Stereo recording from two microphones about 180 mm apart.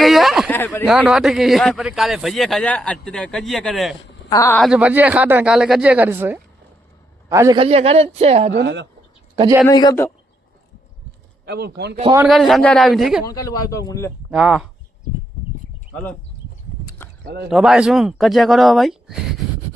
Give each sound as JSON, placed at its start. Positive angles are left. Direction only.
{"t": 0.0, "sound": "a sound", "side_deg": 0}
{"t": 0.5, "sound": "speech", "side_deg": 10}
{"t": 0.9, "sound": "a man's voice", "side_deg": -5}
{"t": 4.3, "sound": "a man's voice", "side_deg": 15}
{"t": 4.6, "sound": "a man's voice", "side_deg": -5}
{"t": 7.6, "sound": "speech", "side_deg": -35}
{"t": 8.5, "sound": "speech", "side_deg": -80}
{"t": 9.6, "sound": "a man's voice", "side_deg": 20}
{"t": 11.4, "sound": "speech", "side_deg": -65}
{"t": 12.3, "sound": "a man's voice", "side_deg": 0}
{"t": 13.2, "sound": "speech", "side_deg": 20}
{"t": 14.3, "sound": "a man's voice", "side_deg": -5}
{"t": 17.2, "sound": "speech", "side_deg": -60}
{"t": 17.5, "sound": "a man's voice", "side_deg": -5}